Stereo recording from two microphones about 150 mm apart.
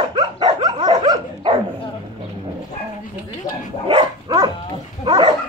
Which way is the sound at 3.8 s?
30° right (ahead or behind).